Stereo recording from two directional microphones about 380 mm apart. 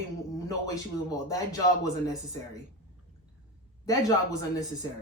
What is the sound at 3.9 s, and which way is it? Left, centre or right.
Speech, centre.